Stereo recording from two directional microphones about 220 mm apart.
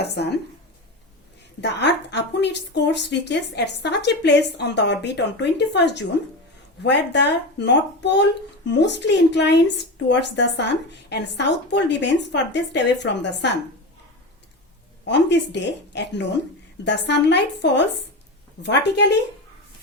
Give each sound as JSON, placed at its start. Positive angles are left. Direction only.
{"t": 0.0, "sound": "a woman's voice", "side_deg": 50}
{"t": 1.6, "sound": "a woman's voice", "side_deg": 50}
{"t": 15.0, "sound": "a woman's voice", "side_deg": 50}